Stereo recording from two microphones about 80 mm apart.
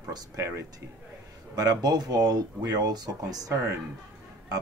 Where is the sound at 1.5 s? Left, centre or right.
Right.